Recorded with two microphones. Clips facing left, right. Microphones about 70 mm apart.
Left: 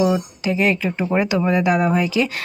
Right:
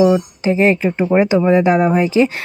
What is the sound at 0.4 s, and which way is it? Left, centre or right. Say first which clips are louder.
Speech: right 5 dB; right.